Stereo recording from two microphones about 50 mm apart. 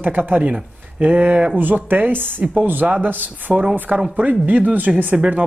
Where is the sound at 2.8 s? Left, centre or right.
Right.